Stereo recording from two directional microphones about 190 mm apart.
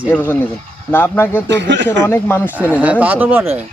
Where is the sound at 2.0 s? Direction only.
15° left (ahead or behind).